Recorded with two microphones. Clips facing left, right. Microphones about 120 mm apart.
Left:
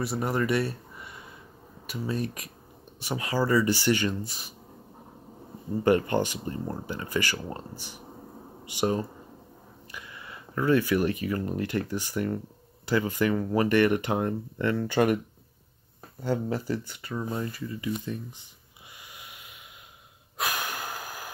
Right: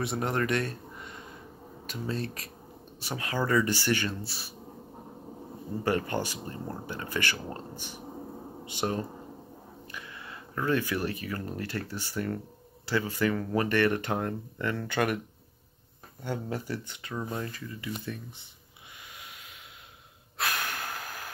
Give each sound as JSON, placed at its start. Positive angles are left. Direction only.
{"t": 0.0, "sound": "speech", "side_deg": 5}
{"t": 5.9, "sound": "speech", "side_deg": 15}
{"t": 9.8, "sound": "a sound", "side_deg": 10}
{"t": 10.9, "sound": "speech", "side_deg": 15}
{"t": 16.3, "sound": "speech", "side_deg": 40}
{"t": 16.8, "sound": "speech", "side_deg": 5}
{"t": 19.1, "sound": "a sound", "side_deg": 10}
{"t": 20.3, "sound": "snort", "side_deg": 15}